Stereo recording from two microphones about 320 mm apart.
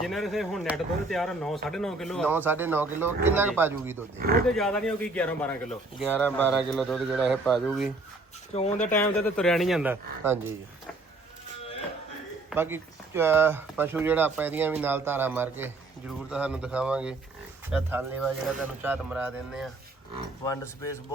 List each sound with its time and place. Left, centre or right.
0.0 s a man's voice: centre
4.2 s speech: right
4.4 s a man's voice: centre
8.5 s speech: left
8.8 s a man's voice: centre
12.5 s a man's voice: centre
20.4 s speech: centre